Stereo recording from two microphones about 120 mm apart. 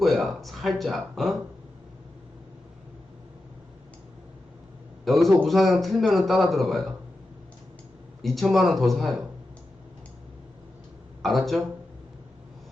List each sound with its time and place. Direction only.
0.0 s speech: centre (ahead or behind)
5.0 s a man's voice: centre (ahead or behind)
8.2 s a man's voice: centre (ahead or behind)
11.2 s speech: centre (ahead or behind)